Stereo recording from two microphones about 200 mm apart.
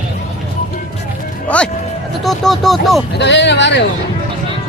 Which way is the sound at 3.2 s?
60° left (ahead or behind).